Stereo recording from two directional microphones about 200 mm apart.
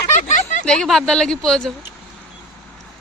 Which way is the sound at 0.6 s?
5° left (ahead or behind).